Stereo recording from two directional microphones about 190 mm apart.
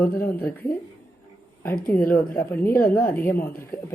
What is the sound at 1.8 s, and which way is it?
Speech, 10° left (ahead or behind).